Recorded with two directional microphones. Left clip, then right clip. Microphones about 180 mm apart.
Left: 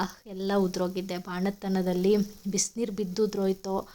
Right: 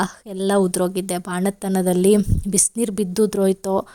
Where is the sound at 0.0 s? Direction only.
55° right (ahead or behind).